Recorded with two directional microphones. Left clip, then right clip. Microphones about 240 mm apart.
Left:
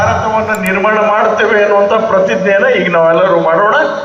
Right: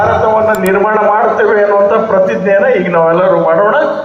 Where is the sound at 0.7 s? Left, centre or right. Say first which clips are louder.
Left 3 dB; right.